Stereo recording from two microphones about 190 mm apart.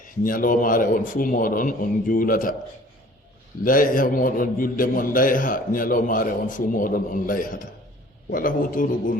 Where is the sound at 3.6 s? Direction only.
45° left (ahead or behind).